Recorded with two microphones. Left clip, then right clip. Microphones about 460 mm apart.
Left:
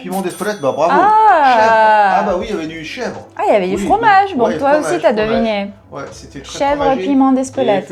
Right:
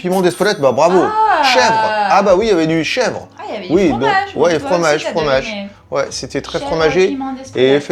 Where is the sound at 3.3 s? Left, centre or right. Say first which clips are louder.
Left 6 dB; left.